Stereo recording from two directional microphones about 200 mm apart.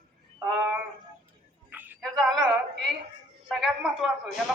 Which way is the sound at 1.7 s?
10° right (ahead or behind).